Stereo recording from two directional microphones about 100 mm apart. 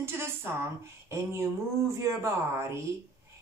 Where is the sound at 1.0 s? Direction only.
30° right (ahead or behind).